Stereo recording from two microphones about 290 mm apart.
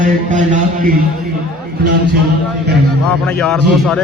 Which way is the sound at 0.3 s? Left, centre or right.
Right.